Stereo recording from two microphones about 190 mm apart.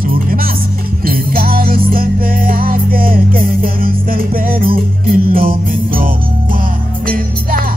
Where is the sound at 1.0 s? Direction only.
50° right (ahead or behind).